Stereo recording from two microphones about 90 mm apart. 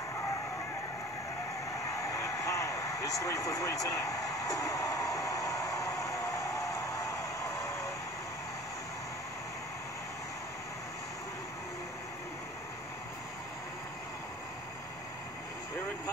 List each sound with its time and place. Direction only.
1.7 s vehicle: 35° left (ahead or behind)